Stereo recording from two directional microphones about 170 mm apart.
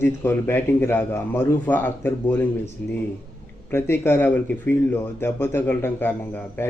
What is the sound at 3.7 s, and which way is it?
Speech, 15° left (ahead or behind).